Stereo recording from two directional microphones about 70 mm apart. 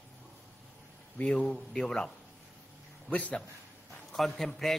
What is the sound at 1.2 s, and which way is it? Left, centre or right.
A man's voice, centre.